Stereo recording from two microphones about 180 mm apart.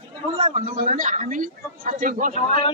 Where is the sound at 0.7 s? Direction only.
45° right (ahead or behind).